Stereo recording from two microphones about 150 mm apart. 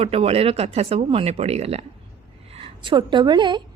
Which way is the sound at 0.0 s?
40° right (ahead or behind).